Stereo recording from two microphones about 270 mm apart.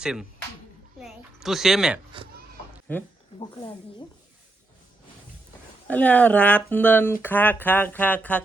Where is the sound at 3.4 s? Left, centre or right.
Centre.